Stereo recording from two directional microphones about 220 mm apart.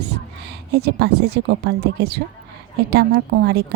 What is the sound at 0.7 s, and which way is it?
A woman's voice, 50° right (ahead or behind).